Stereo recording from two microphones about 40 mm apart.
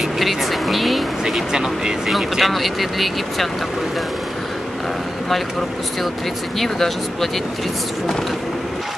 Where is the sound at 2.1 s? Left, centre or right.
Centre.